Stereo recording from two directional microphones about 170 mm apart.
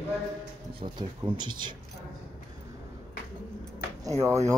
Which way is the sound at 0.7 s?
25° right (ahead or behind).